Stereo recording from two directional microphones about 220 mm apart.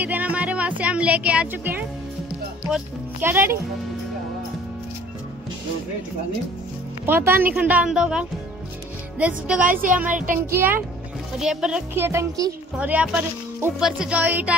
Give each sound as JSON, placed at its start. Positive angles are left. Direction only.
{"t": 0.0, "sound": "speech", "side_deg": -5}
{"t": 7.1, "sound": "speech", "side_deg": -10}
{"t": 9.7, "sound": "speech", "side_deg": -40}
{"t": 10.4, "sound": "speech", "side_deg": -10}